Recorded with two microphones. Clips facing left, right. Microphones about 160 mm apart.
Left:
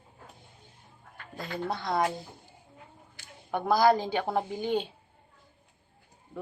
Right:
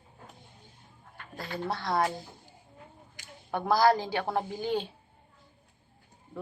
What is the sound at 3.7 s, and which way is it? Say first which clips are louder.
A woman's voice: left 1 dB; 20° left (ahead or behind).